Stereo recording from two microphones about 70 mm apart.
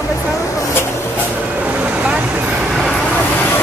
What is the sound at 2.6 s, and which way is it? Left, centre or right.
Vehicle, centre.